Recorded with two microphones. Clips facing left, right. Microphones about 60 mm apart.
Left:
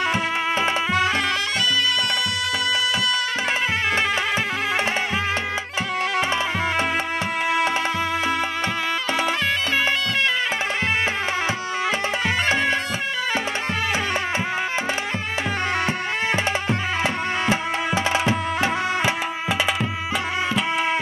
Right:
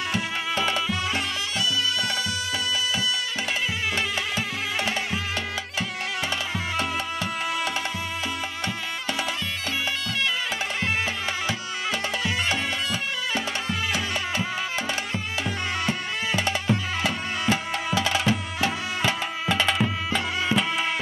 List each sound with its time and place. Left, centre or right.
17.0 s music: left